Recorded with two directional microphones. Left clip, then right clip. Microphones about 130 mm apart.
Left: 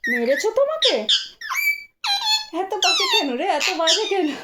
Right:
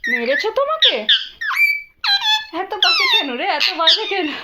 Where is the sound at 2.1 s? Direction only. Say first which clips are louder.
Right 4 dB; 35° left (ahead or behind).